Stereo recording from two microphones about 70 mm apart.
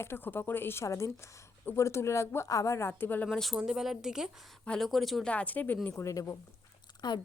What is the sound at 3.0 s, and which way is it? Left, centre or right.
Speech, left.